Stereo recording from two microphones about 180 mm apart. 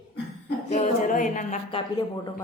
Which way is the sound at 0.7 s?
45° left (ahead or behind).